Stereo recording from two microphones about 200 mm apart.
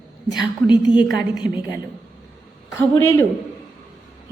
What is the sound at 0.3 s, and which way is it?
Speech, 20° left (ahead or behind).